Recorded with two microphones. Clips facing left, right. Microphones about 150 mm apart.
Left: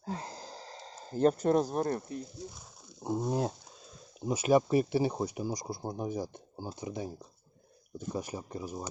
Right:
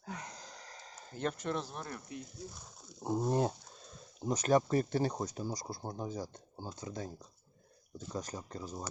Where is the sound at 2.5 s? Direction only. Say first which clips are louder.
Even; 5° left (ahead or behind).